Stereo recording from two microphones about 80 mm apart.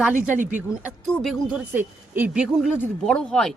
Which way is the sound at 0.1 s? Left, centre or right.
Centre.